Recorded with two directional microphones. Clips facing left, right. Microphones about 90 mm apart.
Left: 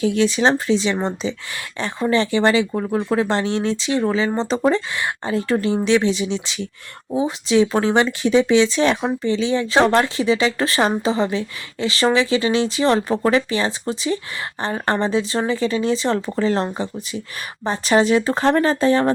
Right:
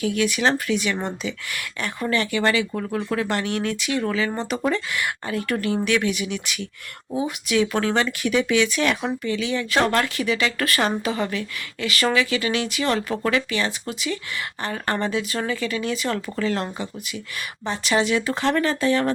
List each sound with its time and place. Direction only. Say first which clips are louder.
0.0 s speech: left 4 dB; 25° left (ahead or behind)
17.7 s speech: left 5 dB; 35° left (ahead or behind)